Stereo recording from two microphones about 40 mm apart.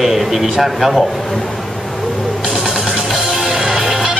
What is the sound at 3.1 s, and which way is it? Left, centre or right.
Music, centre.